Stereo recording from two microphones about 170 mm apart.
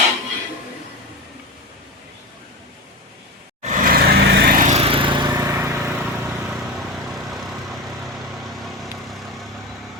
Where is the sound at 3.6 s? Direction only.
45° right (ahead or behind); by 4.7 s 65° right (ahead or behind).